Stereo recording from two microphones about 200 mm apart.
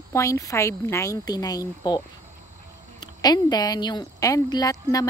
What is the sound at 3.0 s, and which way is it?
A woman's voice, 20° left (ahead or behind).